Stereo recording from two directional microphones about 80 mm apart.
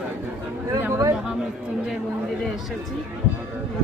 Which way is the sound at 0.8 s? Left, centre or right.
Right.